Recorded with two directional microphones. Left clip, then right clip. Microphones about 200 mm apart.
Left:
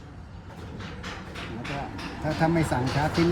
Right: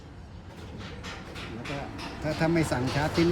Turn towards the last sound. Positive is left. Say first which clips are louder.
# left 1 dB
turn(degrees=0)  # may be behind; listen again after turning